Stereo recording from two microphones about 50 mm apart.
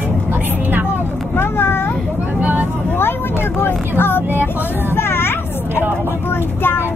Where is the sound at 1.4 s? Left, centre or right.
Left.